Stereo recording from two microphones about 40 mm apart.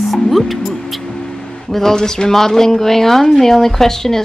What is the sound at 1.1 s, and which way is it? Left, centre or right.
A woman's voice, centre.